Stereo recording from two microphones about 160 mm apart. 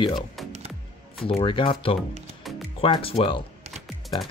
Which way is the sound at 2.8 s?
35° left (ahead or behind).